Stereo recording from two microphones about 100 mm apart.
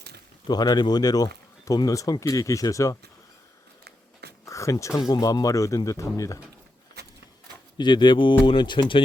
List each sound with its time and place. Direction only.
0.4 s speech: 45° left (ahead or behind)
4.4 s a sound: 30° left (ahead or behind)
4.9 s speech: 35° left (ahead or behind)
7.8 s speech: 50° left (ahead or behind)